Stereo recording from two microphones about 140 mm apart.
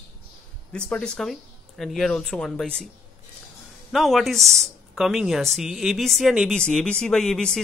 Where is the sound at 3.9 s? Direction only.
Centre (ahead or behind).